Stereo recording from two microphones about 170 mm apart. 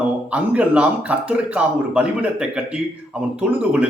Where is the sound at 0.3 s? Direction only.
5° right (ahead or behind).